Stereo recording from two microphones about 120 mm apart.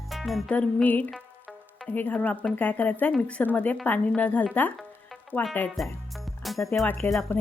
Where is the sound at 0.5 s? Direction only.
10° left (ahead or behind).